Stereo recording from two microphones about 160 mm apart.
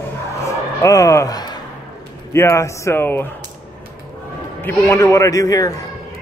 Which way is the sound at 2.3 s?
15° left (ahead or behind).